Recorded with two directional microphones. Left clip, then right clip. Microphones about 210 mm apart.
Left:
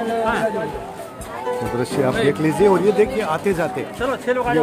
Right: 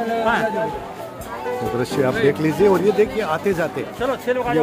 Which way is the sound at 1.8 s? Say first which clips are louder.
Right 1 dB; centre (ahead or behind).